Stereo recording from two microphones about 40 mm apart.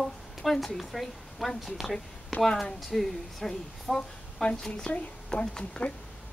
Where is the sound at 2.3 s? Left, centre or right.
Centre.